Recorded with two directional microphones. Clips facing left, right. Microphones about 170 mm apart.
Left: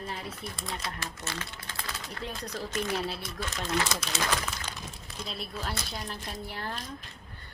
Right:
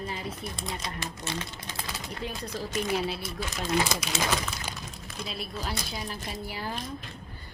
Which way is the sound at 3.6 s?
15° right (ahead or behind).